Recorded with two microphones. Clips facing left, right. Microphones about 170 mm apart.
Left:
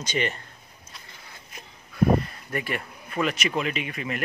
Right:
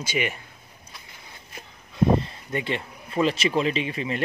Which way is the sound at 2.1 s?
25° right (ahead or behind).